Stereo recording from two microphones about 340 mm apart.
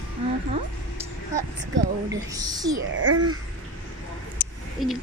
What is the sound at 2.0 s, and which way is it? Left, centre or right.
Speech, centre.